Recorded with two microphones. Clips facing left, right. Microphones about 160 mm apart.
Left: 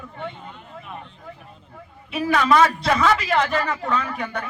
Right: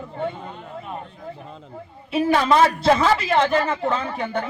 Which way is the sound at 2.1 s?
30° right (ahead or behind).